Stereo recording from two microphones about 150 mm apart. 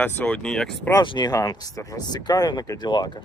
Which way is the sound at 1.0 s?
30° left (ahead or behind).